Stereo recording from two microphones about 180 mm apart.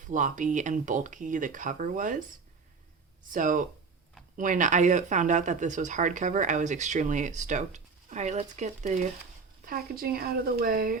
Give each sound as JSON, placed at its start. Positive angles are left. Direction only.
{"t": 0.0, "sound": "speech", "side_deg": -45}
{"t": 3.3, "sound": "speech", "side_deg": -45}
{"t": 9.6, "sound": "speech", "side_deg": -55}